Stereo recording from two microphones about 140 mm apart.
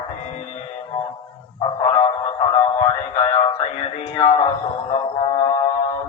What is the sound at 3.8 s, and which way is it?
Music, 40° left (ahead or behind).